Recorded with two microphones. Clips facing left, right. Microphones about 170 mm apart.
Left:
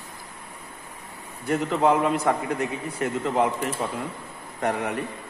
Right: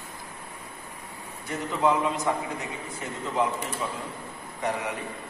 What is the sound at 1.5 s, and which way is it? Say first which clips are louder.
A man's voice: left 4 dB; 60° left (ahead or behind).